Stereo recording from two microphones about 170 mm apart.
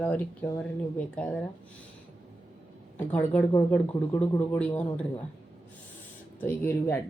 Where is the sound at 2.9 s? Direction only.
10° left (ahead or behind).